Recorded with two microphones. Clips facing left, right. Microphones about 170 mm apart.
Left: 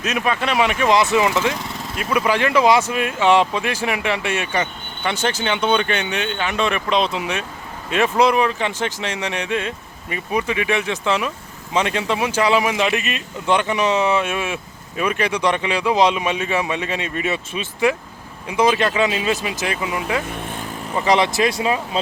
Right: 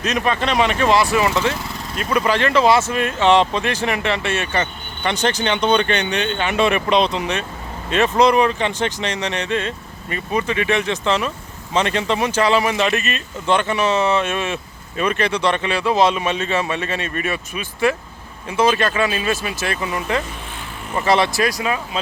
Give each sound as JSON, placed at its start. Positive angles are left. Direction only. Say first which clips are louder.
{"t": 0.0, "sound": "speech", "louder": "right 1 dB", "side_deg": 10}